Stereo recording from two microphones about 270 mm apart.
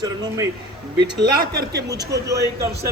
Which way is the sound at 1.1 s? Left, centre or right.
Right.